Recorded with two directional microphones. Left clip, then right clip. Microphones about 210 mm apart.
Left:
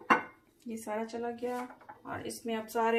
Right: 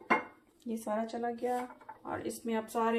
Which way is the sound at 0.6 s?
30° right (ahead or behind).